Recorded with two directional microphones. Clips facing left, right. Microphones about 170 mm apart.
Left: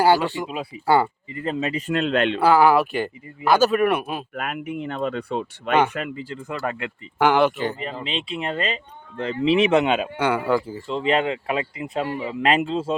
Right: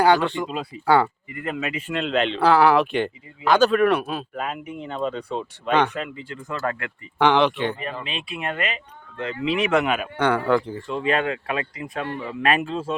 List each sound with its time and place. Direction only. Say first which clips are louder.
0.0 s speech: even; 5° left (ahead or behind)
1.3 s a man's voice: left 3 dB; 30° left (ahead or behind); by 2.4 s 50° left (ahead or behind)
2.4 s speech: even; 5° left (ahead or behind)
4.4 s speech: left 2 dB; 65° left (ahead or behind)
6.5 s speech: right 1 dB; 15° left (ahead or behind)
7.2 s speech: even; 5° left (ahead or behind)
7.8 s speech: left 2 dB; 25° left (ahead or behind)
10.2 s speech: right 1 dB; 5° left (ahead or behind)
10.8 s speech: left 2 dB; 25° left (ahead or behind)
12.0 s speech: left 3 dB; 10° left (ahead or behind)
12.4 s speech: left 2 dB; 20° left (ahead or behind)